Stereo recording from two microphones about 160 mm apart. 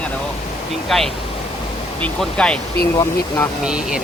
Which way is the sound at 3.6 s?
5° right (ahead or behind).